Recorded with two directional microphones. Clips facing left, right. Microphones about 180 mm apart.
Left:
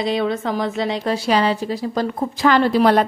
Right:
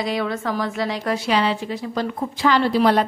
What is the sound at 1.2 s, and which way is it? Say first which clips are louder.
A woman's voice: left 3 dB; 40° left (ahead or behind).